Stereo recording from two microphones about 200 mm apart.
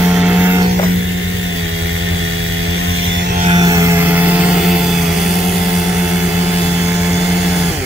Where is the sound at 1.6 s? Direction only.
90° right.